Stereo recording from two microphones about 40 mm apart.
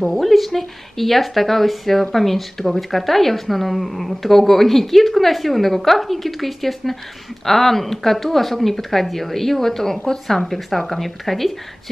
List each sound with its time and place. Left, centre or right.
0.1 s speech: centre